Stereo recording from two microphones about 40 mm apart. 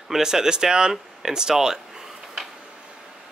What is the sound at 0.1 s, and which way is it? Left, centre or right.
Speech, centre.